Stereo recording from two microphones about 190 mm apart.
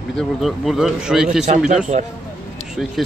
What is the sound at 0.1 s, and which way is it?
Speech, centre (ahead or behind).